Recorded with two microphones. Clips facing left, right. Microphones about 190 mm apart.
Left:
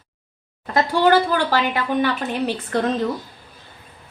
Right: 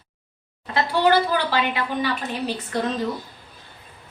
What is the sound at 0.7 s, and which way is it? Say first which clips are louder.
A woman's voice: left 3 dB; 50° left (ahead or behind).